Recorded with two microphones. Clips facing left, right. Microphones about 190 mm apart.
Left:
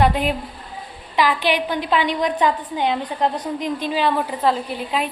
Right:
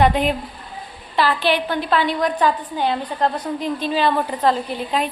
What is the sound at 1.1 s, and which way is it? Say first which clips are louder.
A woman's voice: even; 15° left (ahead or behind).